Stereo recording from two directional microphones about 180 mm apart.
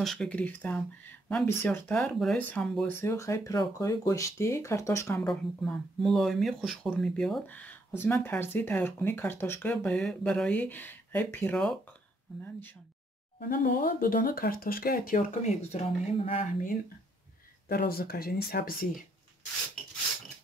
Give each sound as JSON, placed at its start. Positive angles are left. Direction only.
{"t": 0.0, "sound": "speech", "side_deg": 0}
{"t": 2.9, "sound": "speech", "side_deg": 15}
{"t": 5.2, "sound": "speech", "side_deg": 0}
{"t": 13.5, "sound": "speech", "side_deg": 50}
{"t": 17.6, "sound": "speech", "side_deg": 55}